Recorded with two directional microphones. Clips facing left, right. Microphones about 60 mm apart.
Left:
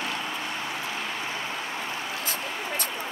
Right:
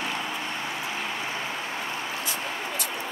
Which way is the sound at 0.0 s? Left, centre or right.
Centre.